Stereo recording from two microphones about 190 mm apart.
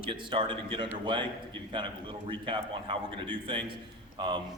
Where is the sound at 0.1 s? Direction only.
25° right (ahead or behind).